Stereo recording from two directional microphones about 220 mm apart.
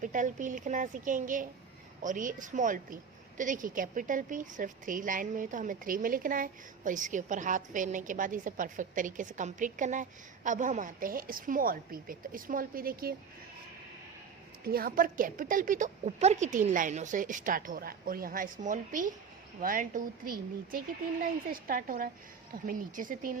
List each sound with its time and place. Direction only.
0.0 s a woman's voice: 35° right (ahead or behind)
14.6 s a woman's voice: 40° right (ahead or behind)